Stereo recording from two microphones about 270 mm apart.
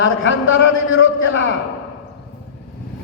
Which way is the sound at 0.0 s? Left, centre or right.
Left.